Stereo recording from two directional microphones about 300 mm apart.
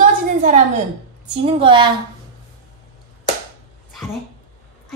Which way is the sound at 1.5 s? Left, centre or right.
Centre.